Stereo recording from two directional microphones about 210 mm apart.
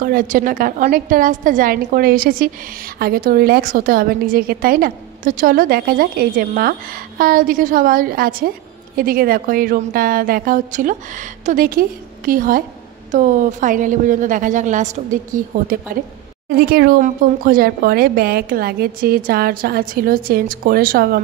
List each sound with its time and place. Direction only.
0.0 s a woman's voice: 40° right (ahead or behind)
16.4 s a woman's voice: 45° right (ahead or behind)